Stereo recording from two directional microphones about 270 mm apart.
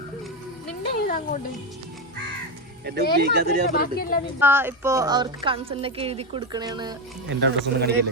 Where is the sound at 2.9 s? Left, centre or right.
Right.